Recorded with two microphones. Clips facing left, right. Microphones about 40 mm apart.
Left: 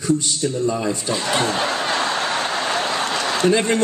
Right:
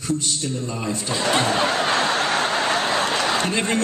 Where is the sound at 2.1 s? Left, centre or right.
Centre.